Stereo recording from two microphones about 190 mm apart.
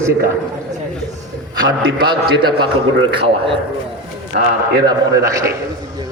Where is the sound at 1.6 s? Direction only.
85° right.